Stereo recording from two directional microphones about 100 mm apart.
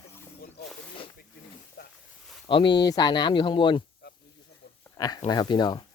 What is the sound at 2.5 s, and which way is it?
Speech, 55° left (ahead or behind).